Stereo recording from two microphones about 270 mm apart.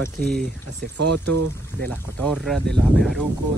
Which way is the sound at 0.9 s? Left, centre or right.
Right.